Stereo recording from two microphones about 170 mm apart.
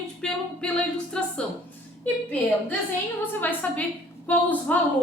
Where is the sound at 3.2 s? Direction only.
10° left (ahead or behind).